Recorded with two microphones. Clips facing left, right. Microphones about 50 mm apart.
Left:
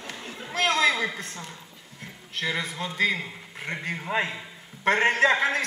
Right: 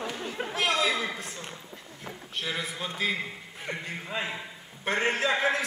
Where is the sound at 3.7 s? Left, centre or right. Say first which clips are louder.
Left 5 dB; left.